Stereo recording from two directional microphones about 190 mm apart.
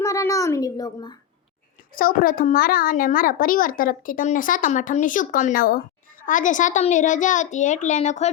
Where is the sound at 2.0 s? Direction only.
50° left (ahead or behind).